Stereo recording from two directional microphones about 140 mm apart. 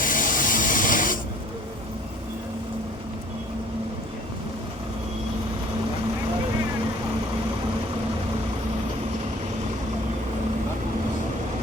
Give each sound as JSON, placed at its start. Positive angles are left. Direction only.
{"t": 0.0, "sound": "spray", "side_deg": 75}